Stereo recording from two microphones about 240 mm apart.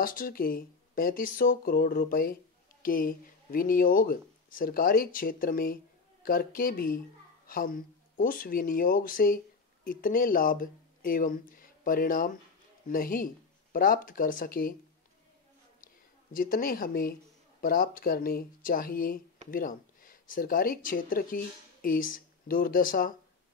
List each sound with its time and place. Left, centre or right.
0.0 s speech: left
16.3 s speech: left